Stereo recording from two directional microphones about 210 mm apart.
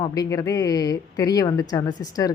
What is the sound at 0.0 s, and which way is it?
Speech, 15° left (ahead or behind).